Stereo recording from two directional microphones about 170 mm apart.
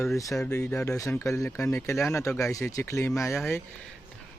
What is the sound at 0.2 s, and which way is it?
Speech, 20° left (ahead or behind).